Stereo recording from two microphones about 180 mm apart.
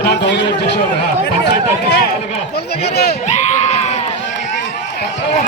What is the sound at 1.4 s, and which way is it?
Speech, 60° left (ahead or behind).